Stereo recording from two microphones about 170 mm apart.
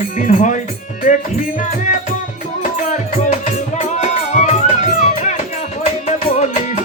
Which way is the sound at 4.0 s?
45° left (ahead or behind).